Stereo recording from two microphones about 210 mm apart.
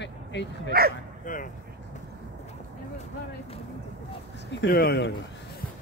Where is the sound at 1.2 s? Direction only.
40° left (ahead or behind).